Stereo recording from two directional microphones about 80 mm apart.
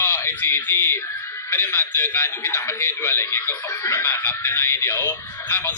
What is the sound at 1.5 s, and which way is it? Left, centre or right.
A man's voice, left.